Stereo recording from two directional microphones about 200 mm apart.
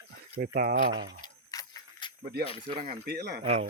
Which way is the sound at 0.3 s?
50° right (ahead or behind).